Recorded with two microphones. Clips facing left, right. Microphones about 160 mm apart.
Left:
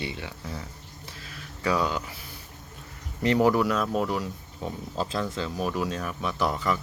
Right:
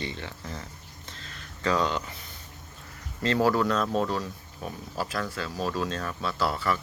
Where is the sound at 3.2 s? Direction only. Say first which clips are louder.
Left 2 dB; 15° left (ahead or behind).